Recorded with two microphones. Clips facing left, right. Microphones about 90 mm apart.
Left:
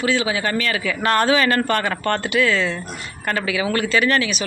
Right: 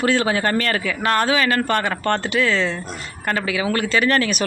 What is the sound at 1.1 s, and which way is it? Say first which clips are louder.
Speech: left 2 dB; 10° right (ahead or behind).